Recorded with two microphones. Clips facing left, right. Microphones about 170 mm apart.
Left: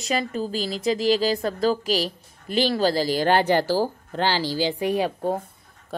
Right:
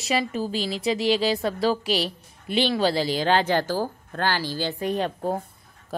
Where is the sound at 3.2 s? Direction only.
15° left (ahead or behind).